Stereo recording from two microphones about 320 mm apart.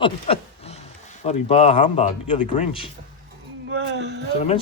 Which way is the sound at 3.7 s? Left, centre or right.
Right.